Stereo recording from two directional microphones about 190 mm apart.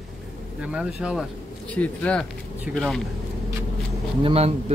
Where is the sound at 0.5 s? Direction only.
5° right (ahead or behind).